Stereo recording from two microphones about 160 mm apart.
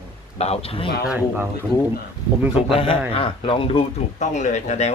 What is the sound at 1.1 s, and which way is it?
Speech, 10° right (ahead or behind).